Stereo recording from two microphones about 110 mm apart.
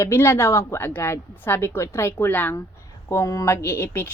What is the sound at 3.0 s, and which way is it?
A woman's voice, 30° left (ahead or behind).